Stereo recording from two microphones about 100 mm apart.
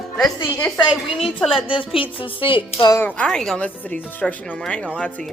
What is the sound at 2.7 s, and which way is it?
Speech, 40° left (ahead or behind).